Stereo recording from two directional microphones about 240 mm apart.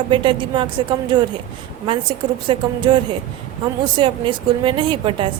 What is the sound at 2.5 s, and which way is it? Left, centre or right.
Speech, centre.